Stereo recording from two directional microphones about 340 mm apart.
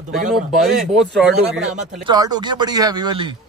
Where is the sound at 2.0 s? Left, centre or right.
Centre.